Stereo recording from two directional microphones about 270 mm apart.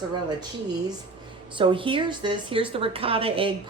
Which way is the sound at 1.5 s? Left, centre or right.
Centre.